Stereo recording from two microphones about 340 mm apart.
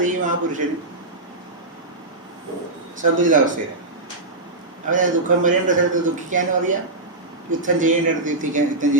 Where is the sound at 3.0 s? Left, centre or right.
Right.